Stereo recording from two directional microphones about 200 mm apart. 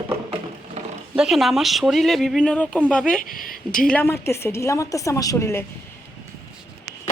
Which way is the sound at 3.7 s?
5° left (ahead or behind).